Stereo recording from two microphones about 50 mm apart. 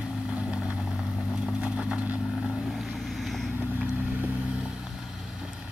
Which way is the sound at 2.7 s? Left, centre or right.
Centre.